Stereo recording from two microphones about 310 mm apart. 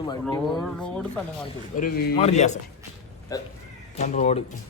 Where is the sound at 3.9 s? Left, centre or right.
Left.